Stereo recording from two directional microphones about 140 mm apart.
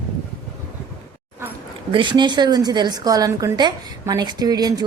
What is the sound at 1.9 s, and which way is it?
A woman's voice, 35° right (ahead or behind).